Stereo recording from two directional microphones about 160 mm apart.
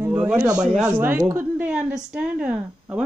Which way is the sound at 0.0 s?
15° right (ahead or behind).